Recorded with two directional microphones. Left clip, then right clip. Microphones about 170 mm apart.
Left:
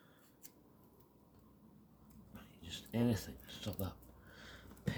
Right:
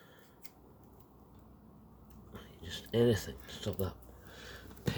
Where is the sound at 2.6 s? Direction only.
15° right (ahead or behind).